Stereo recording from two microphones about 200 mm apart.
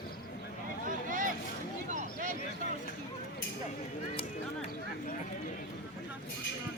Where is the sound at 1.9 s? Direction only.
40° right (ahead or behind).